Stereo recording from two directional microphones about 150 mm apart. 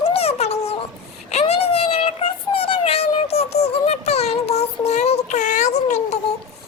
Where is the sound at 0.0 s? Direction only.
40° left (ahead or behind).